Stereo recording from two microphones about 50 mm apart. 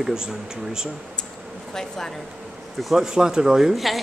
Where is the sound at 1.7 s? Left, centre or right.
Centre.